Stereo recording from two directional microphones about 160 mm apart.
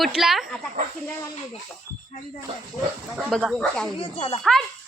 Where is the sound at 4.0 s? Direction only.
35° left (ahead or behind).